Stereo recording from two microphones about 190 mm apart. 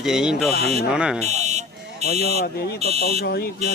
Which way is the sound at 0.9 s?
5° right (ahead or behind).